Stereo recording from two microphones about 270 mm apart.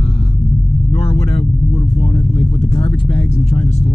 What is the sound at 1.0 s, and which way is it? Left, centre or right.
Vehicle, left.